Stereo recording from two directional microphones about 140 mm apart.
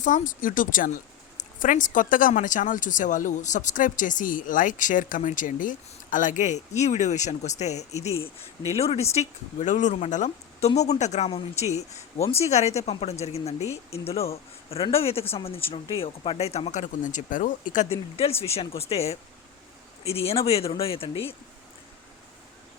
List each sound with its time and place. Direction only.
0.0 s speech: 70° left (ahead or behind)
11.3 s speech: 45° left (ahead or behind)
17.0 s speech: 65° left (ahead or behind)
17.8 s speech: 45° left (ahead or behind)